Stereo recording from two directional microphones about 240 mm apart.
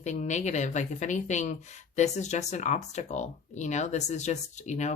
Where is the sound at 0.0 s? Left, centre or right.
Left.